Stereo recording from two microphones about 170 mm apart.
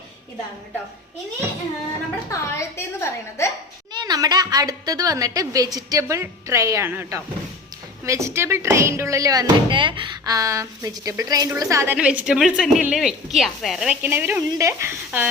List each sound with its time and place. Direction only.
2.3 s a woman's voice: 15° left (ahead or behind)
3.9 s a woman's voice: 25° right (ahead or behind)